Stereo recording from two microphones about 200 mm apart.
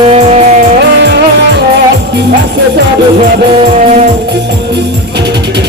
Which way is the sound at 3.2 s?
35° right (ahead or behind).